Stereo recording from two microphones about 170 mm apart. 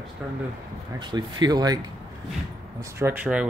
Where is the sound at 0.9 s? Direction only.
25° right (ahead or behind).